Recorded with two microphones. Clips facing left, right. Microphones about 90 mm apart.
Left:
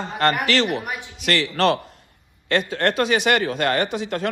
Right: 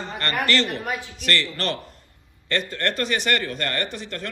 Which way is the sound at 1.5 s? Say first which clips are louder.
Left 9 dB; 70° left (ahead or behind).